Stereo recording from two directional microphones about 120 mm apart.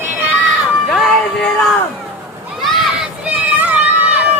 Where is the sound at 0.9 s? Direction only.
Centre (ahead or behind).